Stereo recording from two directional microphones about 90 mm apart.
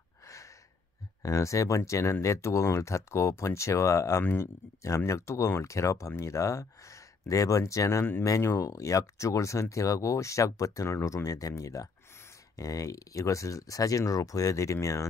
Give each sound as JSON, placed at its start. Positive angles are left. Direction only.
{"t": 1.2, "sound": "speech", "side_deg": 35}